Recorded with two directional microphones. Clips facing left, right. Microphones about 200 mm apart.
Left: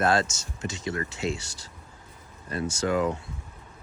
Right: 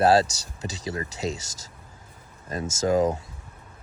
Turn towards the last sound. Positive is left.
turn(degrees=-40)  # may be behind; listen again after turning